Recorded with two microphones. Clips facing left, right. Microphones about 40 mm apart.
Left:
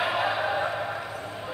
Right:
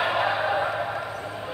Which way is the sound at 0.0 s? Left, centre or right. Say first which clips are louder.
Right 2 dB; centre.